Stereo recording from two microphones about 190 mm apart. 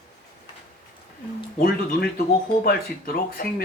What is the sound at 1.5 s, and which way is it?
Speech, 50° left (ahead or behind).